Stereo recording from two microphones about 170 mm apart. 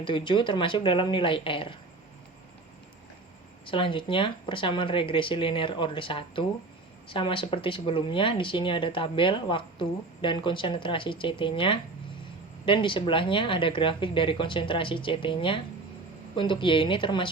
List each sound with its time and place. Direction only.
0.0 s speech: 30° left (ahead or behind)
3.7 s speech: 30° left (ahead or behind)